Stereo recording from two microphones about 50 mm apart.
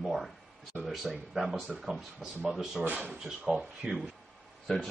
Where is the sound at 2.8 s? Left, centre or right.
Right.